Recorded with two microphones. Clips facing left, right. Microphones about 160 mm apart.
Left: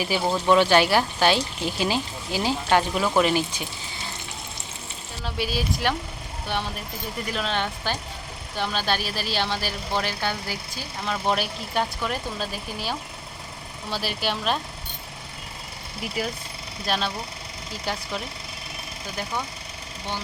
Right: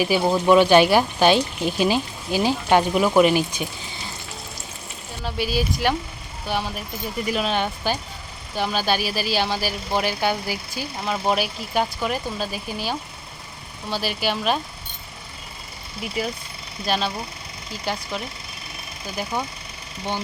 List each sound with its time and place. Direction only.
0.0 s speech: 10° right (ahead or behind)
5.2 s speech: centre (ahead or behind)
16.0 s speech: centre (ahead or behind)